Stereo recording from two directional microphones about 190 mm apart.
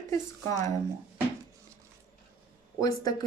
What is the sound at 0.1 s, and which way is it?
Speech, 15° left (ahead or behind).